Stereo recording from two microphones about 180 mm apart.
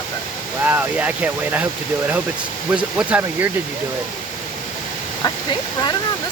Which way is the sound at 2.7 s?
5° right (ahead or behind).